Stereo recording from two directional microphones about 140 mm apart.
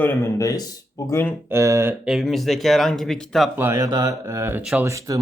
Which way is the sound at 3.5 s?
20° right (ahead or behind).